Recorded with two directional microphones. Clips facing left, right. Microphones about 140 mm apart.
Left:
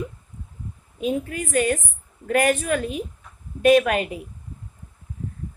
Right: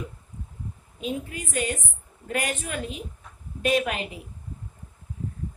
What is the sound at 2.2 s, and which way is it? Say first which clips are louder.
A woman's voice: left 9 dB; 55° left (ahead or behind).